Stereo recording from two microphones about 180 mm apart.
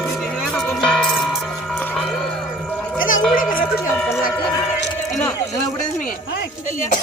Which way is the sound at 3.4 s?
50° left (ahead or behind).